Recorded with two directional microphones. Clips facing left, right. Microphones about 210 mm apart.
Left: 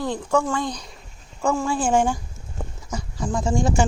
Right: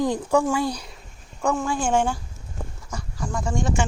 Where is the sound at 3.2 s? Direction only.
20° left (ahead or behind).